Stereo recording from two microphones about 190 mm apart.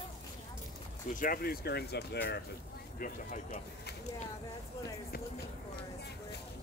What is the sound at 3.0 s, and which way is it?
Speech, 45° left (ahead or behind).